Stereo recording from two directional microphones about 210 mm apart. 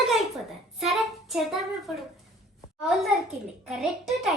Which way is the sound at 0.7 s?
Centre (ahead or behind).